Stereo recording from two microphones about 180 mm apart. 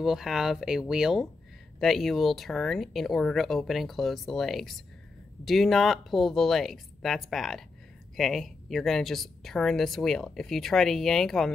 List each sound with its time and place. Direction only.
0.0 s a woman's voice: centre (ahead or behind)